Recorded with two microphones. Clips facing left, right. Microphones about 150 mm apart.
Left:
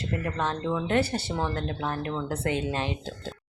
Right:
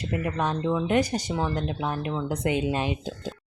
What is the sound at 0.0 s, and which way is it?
Speech, 15° right (ahead or behind).